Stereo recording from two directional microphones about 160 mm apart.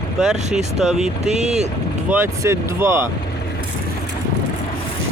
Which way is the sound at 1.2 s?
45° right (ahead or behind).